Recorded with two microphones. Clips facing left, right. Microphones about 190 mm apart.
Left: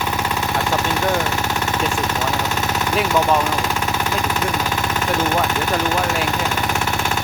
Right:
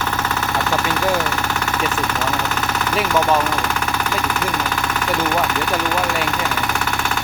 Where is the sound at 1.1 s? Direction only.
15° left (ahead or behind).